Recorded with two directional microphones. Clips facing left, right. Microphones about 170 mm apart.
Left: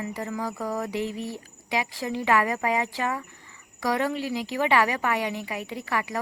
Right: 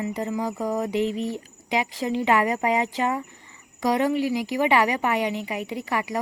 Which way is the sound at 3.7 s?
15° right (ahead or behind).